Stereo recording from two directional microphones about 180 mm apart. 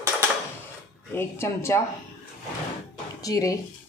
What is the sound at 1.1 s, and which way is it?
Speech, 15° left (ahead or behind).